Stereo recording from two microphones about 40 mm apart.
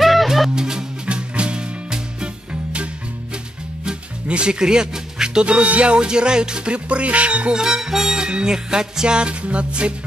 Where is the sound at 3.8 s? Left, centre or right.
Right.